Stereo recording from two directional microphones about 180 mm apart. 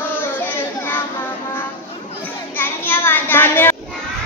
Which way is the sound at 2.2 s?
10° left (ahead or behind).